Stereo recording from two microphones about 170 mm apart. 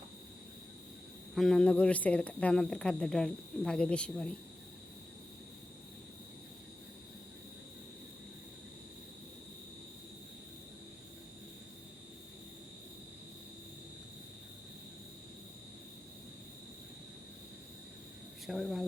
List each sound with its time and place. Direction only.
1.4 s speech: 5° left (ahead or behind)
18.4 s speech: centre (ahead or behind)